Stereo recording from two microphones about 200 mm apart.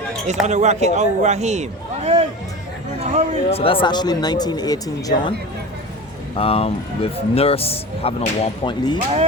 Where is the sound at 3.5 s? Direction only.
30° left (ahead or behind).